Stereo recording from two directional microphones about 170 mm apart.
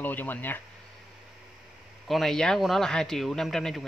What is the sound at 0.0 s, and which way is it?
Speech, 10° left (ahead or behind).